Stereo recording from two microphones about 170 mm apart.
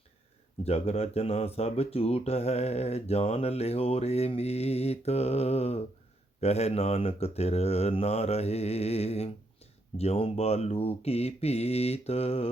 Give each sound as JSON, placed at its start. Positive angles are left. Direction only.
{"t": 0.6, "sound": "speech", "side_deg": 35}